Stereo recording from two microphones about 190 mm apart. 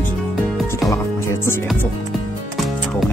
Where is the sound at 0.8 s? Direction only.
15° left (ahead or behind).